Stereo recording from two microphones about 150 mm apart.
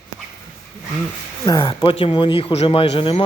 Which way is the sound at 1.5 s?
30° left (ahead or behind).